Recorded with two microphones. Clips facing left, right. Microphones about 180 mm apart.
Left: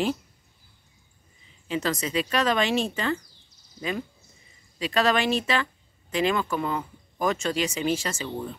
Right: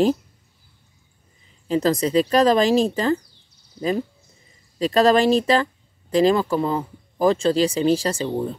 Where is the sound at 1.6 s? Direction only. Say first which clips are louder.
Right 8 dB; 35° right (ahead or behind).